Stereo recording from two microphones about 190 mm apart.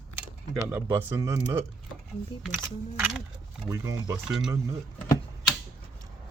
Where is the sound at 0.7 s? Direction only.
10° right (ahead or behind).